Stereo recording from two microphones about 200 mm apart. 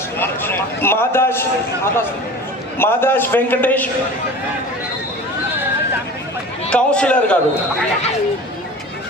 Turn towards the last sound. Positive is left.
turn(degrees=5)  # may be behind; listen again after turning